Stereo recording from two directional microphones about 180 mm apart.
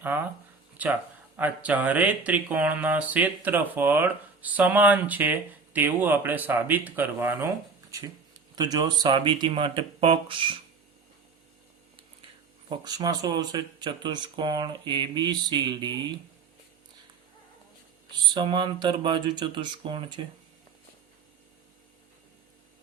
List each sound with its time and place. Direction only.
0.0 s speech: 10° right (ahead or behind); by 10.6 s 30° right (ahead or behind)
12.6 s speech: 25° right (ahead or behind)
18.3 s speech: 25° right (ahead or behind)